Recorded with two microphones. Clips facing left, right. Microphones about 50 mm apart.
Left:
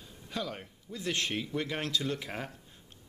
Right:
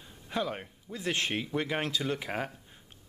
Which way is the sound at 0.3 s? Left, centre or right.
Right.